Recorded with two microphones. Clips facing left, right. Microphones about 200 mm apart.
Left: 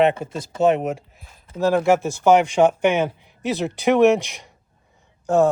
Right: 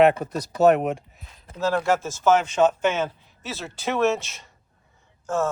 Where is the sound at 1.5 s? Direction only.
15° left (ahead or behind).